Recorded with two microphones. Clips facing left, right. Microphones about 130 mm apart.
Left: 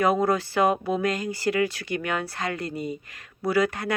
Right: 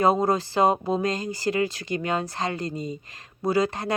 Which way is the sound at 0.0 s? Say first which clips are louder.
Right 1 dB; 25° right (ahead or behind).